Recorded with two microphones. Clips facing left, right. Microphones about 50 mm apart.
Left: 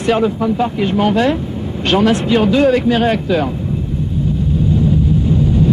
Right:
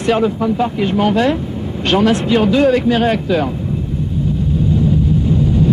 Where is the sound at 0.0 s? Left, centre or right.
Centre.